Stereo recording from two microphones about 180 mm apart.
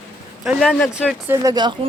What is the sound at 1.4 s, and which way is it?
Speech, 20° right (ahead or behind).